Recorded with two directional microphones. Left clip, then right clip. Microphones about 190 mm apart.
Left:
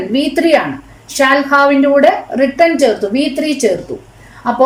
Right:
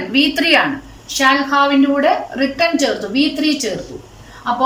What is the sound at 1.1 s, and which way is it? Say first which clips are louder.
A woman's voice: left 3 dB; 35° left (ahead or behind).